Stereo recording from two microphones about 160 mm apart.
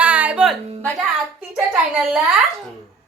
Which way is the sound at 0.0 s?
10° right (ahead or behind).